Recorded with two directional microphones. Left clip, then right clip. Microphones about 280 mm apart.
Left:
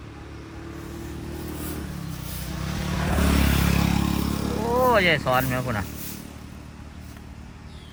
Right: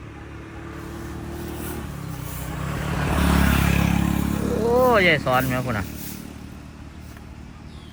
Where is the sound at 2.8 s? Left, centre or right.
Right.